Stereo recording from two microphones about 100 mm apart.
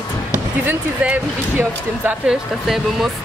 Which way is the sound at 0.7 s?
20° right (ahead or behind).